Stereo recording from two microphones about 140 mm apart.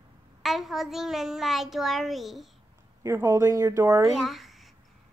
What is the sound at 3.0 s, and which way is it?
Speech, 20° right (ahead or behind).